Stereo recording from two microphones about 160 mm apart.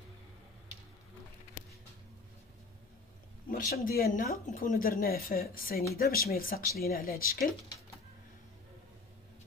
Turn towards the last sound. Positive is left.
turn(degrees=65)  # may be behind; listen again after turning